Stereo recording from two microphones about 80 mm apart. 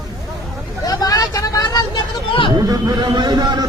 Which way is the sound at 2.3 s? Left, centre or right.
Left.